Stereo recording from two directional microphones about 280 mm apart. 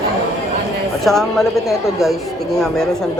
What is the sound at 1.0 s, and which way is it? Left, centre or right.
A man's voice, centre.